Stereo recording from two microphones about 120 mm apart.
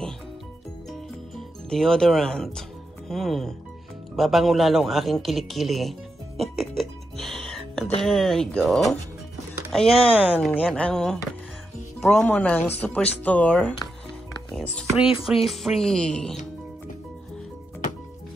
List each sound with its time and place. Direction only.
1.7 s speech: 5° left (ahead or behind)
4.2 s music: centre (ahead or behind)
8.0 s speech: centre (ahead or behind)
10.1 s speech: 15° right (ahead or behind)
10.5 s speech: 10° left (ahead or behind)
15.0 s speech: 45° left (ahead or behind)
15.2 s speech: centre (ahead or behind)